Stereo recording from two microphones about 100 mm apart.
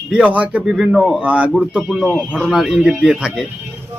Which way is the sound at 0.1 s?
15° right (ahead or behind).